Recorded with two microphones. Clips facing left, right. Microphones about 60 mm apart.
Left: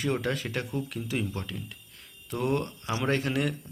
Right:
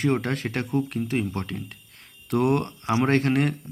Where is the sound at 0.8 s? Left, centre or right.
Right.